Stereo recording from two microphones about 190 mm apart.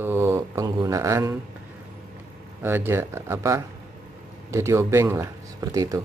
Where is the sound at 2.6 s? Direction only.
10° right (ahead or behind).